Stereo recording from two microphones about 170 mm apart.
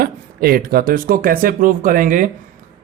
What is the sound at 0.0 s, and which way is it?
Speech, 60° right (ahead or behind).